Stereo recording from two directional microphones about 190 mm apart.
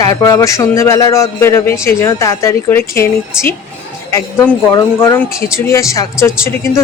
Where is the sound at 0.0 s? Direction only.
20° left (ahead or behind).